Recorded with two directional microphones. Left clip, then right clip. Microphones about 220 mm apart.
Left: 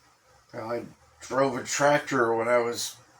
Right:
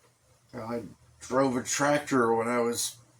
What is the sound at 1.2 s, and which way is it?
Speech, 45° right (ahead or behind).